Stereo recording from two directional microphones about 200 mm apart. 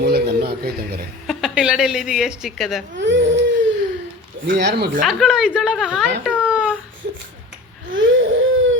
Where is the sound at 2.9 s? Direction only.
65° right (ahead or behind).